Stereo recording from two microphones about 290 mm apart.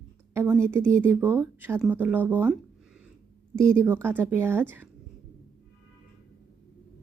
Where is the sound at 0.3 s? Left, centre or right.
Centre.